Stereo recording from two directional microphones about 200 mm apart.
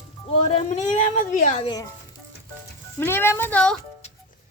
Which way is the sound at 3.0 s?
10° left (ahead or behind).